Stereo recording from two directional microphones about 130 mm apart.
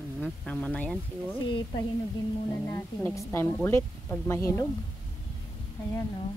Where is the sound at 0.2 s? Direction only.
10° left (ahead or behind).